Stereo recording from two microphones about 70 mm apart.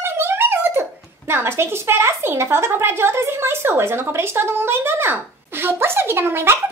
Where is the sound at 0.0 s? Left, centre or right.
Right.